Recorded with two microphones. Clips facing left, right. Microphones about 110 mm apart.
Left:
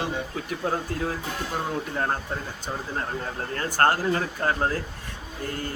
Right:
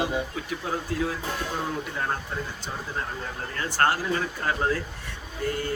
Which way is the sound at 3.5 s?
45° left (ahead or behind).